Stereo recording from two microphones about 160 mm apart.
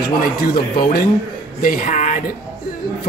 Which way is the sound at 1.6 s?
60° left (ahead or behind).